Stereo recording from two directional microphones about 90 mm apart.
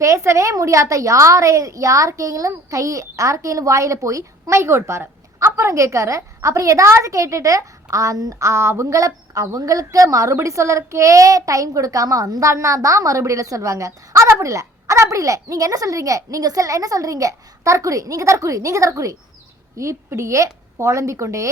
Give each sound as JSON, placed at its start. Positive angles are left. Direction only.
{"t": 0.0, "sound": "a woman's voice", "side_deg": -35}